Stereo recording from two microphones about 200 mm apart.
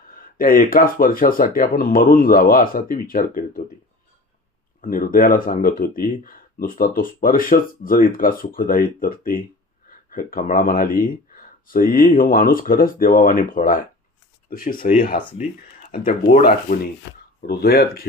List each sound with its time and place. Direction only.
0.1 s speech: 45° left (ahead or behind)
4.8 s speech: 45° left (ahead or behind)
15.2 s speech: 25° left (ahead or behind)
15.9 s speech: 45° left (ahead or behind)
17.0 s speech: 60° left (ahead or behind)
17.4 s speech: 50° left (ahead or behind)